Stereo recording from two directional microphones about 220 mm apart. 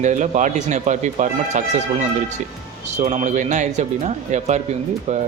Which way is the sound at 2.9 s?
30° right (ahead or behind).